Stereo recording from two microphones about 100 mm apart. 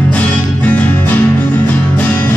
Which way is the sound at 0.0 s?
15° left (ahead or behind).